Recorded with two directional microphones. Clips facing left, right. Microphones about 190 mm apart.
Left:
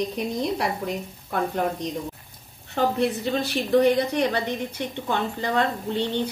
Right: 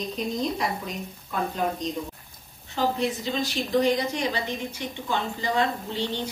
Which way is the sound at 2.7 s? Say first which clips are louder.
Left 3 dB; 60° left (ahead or behind).